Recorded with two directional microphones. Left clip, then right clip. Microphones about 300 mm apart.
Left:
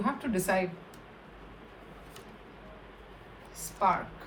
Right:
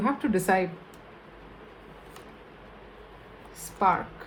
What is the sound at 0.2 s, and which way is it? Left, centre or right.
Speech, right.